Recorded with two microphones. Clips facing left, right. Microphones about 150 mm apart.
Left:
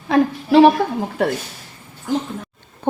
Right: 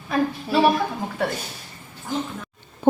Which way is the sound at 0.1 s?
75° left (ahead or behind).